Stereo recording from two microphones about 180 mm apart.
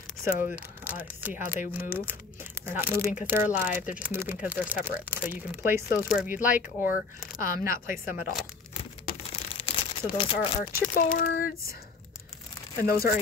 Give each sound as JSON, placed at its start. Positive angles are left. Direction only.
{"t": 0.3, "sound": "speech", "side_deg": 45}
{"t": 0.6, "sound": "speech", "side_deg": -10}
{"t": 6.8, "sound": "speech", "side_deg": 50}
{"t": 9.3, "sound": "crumpling", "side_deg": 30}
{"t": 10.7, "sound": "speech", "side_deg": 50}
{"t": 12.8, "sound": "speech", "side_deg": 55}